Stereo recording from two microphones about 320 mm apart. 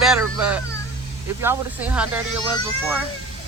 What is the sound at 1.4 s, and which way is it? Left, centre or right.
Speech, centre.